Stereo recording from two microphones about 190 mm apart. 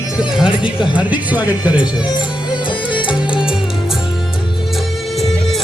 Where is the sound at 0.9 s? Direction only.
10° right (ahead or behind).